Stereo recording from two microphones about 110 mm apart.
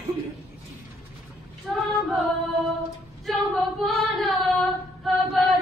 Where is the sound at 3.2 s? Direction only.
Centre (ahead or behind).